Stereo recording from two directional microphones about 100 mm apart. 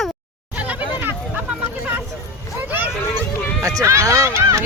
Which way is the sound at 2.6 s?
15° right (ahead or behind).